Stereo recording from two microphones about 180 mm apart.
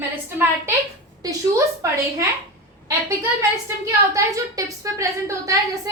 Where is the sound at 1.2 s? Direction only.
15° right (ahead or behind).